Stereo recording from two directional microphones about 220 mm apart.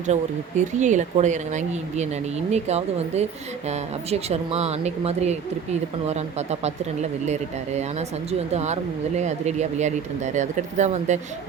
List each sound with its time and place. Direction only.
0.1 s speech: 35° right (ahead or behind)